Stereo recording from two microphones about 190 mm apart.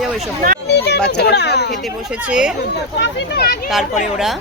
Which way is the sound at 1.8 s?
5° right (ahead or behind).